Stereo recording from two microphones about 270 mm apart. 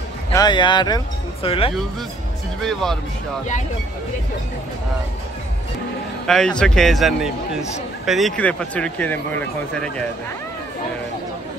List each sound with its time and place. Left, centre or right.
0.3 s speech: centre
2.6 s speech: centre
6.2 s speech: centre